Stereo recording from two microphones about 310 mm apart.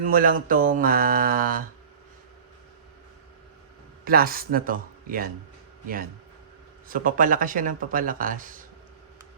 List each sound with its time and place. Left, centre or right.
0.0 s speech: right
4.0 s speech: right
6.8 s speech: right